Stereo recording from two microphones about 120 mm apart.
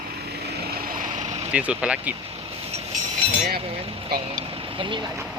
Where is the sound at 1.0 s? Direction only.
85° right.